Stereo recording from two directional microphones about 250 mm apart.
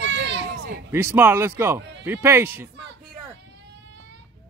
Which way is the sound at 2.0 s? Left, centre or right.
Centre.